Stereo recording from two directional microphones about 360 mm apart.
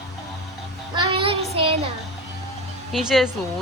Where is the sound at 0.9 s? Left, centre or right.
Centre.